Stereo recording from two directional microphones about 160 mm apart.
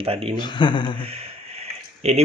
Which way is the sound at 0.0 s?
35° right (ahead or behind).